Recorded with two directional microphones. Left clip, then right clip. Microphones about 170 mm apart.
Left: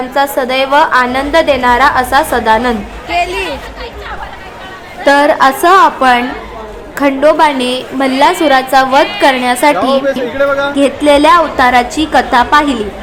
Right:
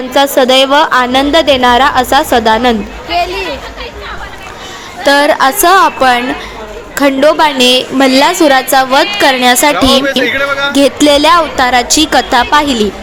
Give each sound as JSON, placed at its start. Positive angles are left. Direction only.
{"t": 0.1, "sound": "a woman's voice", "side_deg": -40}
{"t": 3.1, "sound": "speech", "side_deg": 5}
{"t": 5.0, "sound": "a woman's voice", "side_deg": -35}
{"t": 10.1, "sound": "speech", "side_deg": 0}
{"t": 10.8, "sound": "a woman's voice", "side_deg": -40}